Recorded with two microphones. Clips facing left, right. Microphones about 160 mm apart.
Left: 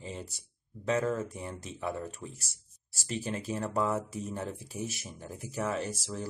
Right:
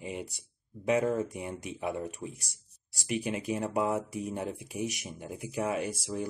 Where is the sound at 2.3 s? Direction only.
65° right (ahead or behind).